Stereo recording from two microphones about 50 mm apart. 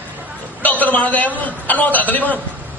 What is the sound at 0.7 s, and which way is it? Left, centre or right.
A man's voice, left.